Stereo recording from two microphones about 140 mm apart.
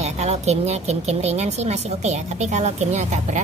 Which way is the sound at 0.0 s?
50° right (ahead or behind).